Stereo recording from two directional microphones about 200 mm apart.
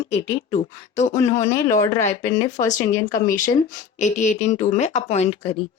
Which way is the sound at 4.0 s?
35° left (ahead or behind).